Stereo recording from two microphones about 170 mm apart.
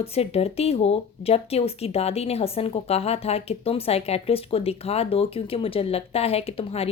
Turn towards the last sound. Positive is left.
turn(degrees=35)  # may be behind; listen again after turning